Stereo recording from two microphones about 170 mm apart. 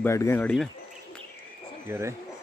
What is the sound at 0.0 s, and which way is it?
Speech, 15° left (ahead or behind).